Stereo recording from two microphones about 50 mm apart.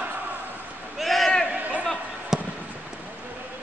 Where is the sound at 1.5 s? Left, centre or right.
Right.